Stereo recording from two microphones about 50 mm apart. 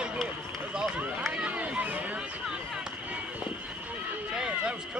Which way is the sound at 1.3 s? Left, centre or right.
Right.